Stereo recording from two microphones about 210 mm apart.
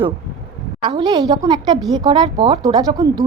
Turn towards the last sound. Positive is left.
turn(degrees=-20)  # may be behind; listen again after turning